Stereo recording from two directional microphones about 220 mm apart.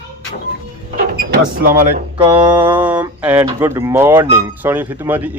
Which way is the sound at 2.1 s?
10° right (ahead or behind).